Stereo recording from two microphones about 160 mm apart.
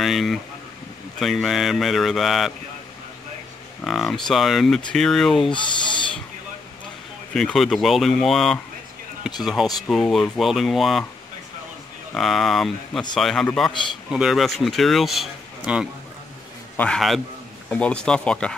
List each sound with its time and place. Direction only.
0.0 s speech: centre (ahead or behind)
3.8 s speech: centre (ahead or behind)
5.5 s speech: 30° left (ahead or behind)
7.3 s speech: centre (ahead or behind)
12.1 s speech: centre (ahead or behind)
16.7 s a man's voice: 5° left (ahead or behind)